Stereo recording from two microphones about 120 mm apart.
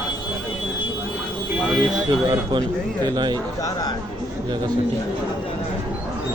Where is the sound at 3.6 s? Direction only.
30° left (ahead or behind).